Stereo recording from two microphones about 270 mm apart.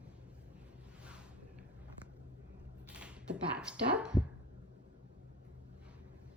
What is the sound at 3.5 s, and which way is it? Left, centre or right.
Speech, centre.